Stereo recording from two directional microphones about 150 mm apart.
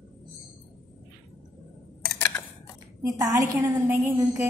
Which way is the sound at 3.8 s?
15° right (ahead or behind).